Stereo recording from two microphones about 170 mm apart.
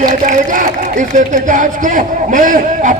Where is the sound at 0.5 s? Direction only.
50° right (ahead or behind).